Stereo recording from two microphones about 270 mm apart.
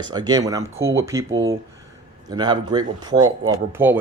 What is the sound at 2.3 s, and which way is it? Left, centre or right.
Speech, centre.